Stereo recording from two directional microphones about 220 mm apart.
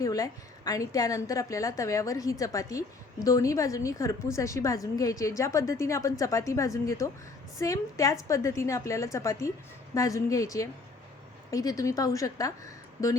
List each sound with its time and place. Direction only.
0.0 s a woman's voice: 15° left (ahead or behind)